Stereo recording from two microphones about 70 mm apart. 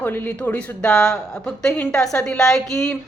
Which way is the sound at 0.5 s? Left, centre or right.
Centre.